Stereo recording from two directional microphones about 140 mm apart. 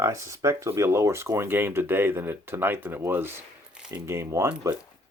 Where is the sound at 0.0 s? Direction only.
20° right (ahead or behind).